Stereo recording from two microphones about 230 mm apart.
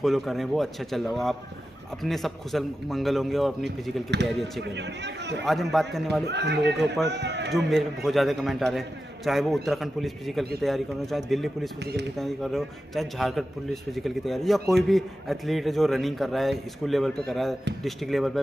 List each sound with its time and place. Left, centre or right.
0.0 s a man's voice: centre
4.6 s a man's voice: right
5.4 s a man's voice: centre
6.2 s a man's voice: right
7.5 s a man's voice: centre
11.8 s a man's voice: right
12.2 s a man's voice: centre